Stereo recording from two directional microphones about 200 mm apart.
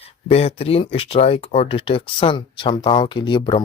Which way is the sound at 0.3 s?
30° left (ahead or behind).